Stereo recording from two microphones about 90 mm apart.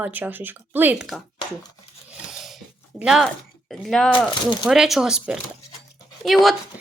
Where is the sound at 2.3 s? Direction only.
Centre (ahead or behind).